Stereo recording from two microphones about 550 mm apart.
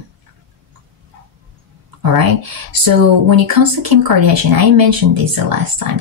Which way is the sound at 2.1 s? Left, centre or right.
Right.